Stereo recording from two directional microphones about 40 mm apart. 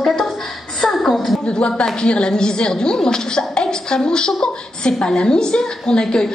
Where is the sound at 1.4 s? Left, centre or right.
Left.